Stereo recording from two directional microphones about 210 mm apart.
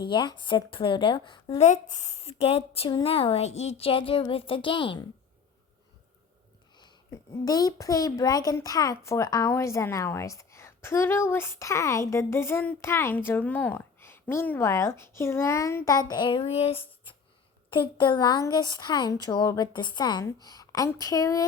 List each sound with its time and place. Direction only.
0.0 s a woman's voice: 20° left (ahead or behind)
7.4 s a child's voice: 20° left (ahead or behind)